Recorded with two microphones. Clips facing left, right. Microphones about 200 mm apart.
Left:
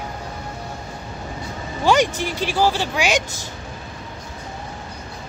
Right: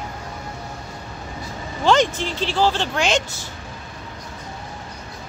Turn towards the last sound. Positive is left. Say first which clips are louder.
# even
turn(degrees=10)  # may be behind; listen again after turning